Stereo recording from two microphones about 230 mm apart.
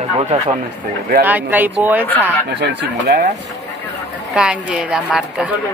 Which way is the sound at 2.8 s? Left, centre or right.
Right.